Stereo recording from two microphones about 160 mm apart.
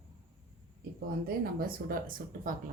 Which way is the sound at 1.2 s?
65° right (ahead or behind).